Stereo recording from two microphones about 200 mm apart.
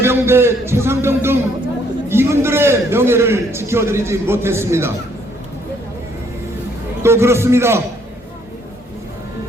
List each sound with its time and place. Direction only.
0.0 s a man's voice: 10° right (ahead or behind)
7.0 s a man's voice: 15° right (ahead or behind)